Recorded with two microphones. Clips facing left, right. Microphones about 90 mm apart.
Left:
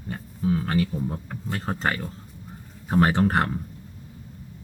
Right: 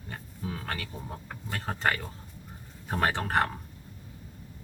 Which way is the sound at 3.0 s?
15° left (ahead or behind).